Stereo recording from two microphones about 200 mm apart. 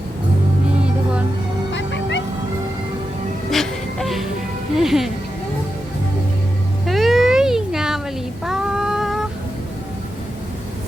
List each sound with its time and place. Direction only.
1.7 s music: 65° left (ahead or behind)
3.5 s music: centre (ahead or behind)
6.8 s cat: centre (ahead or behind)
8.4 s a sound: 5° right (ahead or behind)